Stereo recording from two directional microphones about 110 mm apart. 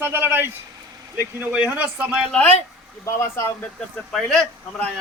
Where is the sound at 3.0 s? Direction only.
25° left (ahead or behind).